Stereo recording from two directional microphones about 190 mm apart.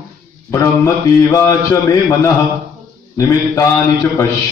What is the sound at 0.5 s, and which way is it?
A man's voice, 15° left (ahead or behind).